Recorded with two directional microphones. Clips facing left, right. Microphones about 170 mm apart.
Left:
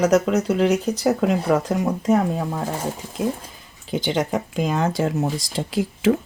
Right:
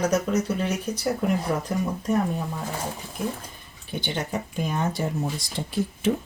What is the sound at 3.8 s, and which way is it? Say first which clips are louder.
Speech: left 8 dB; 90° left.